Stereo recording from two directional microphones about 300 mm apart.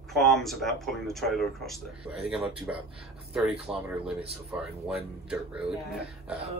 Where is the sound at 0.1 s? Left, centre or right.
Centre.